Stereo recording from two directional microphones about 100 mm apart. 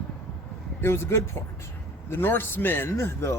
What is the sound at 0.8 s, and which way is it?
A man's voice, 25° left (ahead or behind).